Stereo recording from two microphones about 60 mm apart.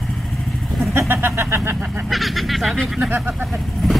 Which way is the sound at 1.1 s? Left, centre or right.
Right.